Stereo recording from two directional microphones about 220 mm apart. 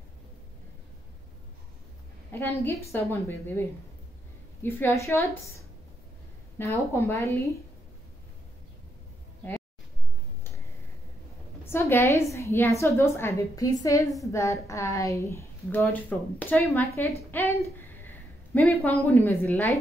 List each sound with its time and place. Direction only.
2.3 s a woman's voice: 10° left (ahead or behind)
4.6 s a woman's voice: 10° left (ahead or behind)
6.6 s a woman's voice: 10° left (ahead or behind)
11.6 s a woman's voice: 10° left (ahead or behind)